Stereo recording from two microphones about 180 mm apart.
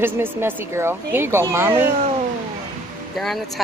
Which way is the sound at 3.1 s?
Centre (ahead or behind).